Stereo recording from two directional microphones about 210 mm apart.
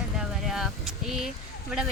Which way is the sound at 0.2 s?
Centre (ahead or behind).